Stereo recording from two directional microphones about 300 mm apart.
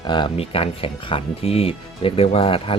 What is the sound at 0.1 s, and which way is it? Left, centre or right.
Speech, centre.